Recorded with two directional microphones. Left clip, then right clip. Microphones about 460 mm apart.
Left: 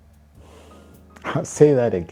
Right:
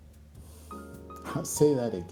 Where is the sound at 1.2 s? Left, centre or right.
Left.